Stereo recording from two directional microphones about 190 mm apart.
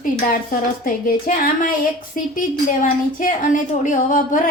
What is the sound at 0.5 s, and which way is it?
Speech, 45° left (ahead or behind).